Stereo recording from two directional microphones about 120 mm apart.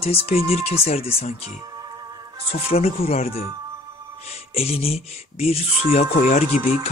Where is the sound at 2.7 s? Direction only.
55° left (ahead or behind).